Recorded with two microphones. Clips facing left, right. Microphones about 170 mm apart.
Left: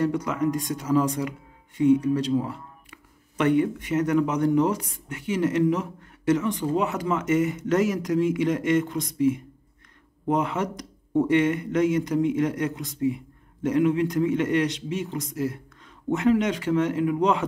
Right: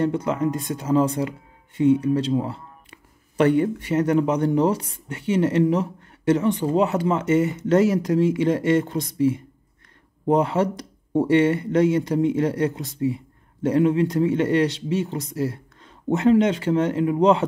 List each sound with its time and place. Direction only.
0.0 s speech: 30° right (ahead or behind)